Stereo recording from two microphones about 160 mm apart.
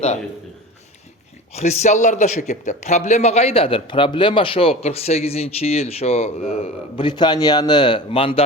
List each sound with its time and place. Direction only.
1.5 s a man's voice: 45° left (ahead or behind)